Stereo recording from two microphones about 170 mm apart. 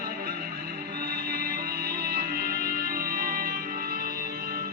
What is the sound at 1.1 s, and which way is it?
Music, 65° right (ahead or behind).